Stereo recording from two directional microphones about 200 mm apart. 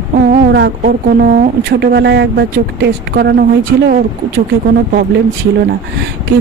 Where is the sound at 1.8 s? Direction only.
55° right (ahead or behind).